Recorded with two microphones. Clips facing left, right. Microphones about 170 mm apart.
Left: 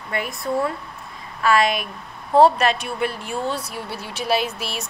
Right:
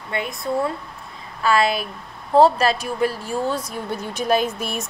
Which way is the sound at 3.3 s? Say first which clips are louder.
Right 1 dB; 10° right (ahead or behind).